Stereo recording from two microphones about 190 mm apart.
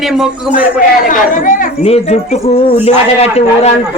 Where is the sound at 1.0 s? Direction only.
45° left (ahead or behind).